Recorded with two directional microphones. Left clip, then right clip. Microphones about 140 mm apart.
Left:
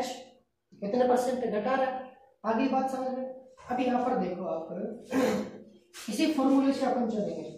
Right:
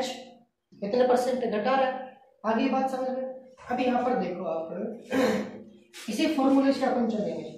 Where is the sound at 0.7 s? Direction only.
20° right (ahead or behind).